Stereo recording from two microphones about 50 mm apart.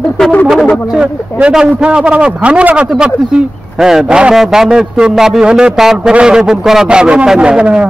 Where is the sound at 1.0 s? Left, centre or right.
Right.